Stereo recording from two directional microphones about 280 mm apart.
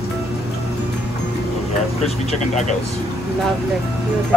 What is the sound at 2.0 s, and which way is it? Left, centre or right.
Speech, left.